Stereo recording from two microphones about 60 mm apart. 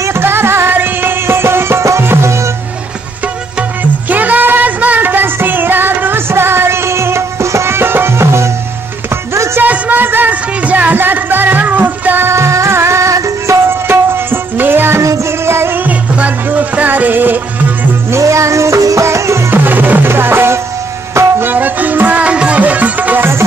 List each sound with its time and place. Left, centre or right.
0.0 s music: right
4.1 s music: right
9.6 s music: right
12.3 s music: right
13.7 s music: right
15.0 s music: right
15.8 s music: right
18.1 s music: right
19.0 s music: right
19.5 s music: right
21.5 s music: right
22.2 s music: centre